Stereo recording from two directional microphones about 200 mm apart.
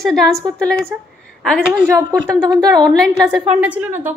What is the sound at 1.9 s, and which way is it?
Speech, 15° right (ahead or behind).